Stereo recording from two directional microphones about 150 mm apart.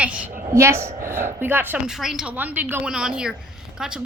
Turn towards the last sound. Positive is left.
turn(degrees=-5)  # may be behind; listen again after turning